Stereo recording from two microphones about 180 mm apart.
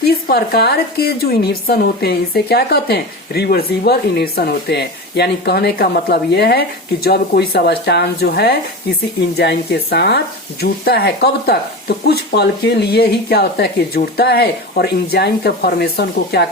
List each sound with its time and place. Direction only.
0.0 s a woman's voice: 60° left (ahead or behind)